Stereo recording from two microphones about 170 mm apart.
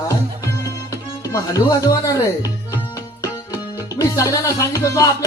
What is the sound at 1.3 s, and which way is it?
Speech, 20° left (ahead or behind).